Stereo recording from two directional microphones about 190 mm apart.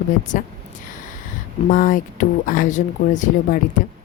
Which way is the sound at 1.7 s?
45° left (ahead or behind).